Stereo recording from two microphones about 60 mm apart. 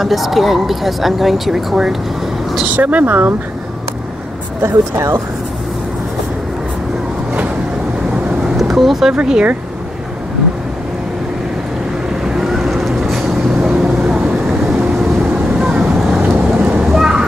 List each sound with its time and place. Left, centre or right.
0.0 s speech: centre
2.7 s speech: right
4.6 s speech: right
8.5 s vehicle: centre
9.1 s speech: centre
12.4 s vehicle: centre
13.7 s vehicle: centre
16.9 s a sound: centre